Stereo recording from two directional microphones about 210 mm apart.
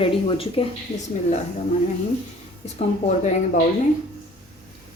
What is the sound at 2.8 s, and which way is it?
Speech, 30° left (ahead or behind).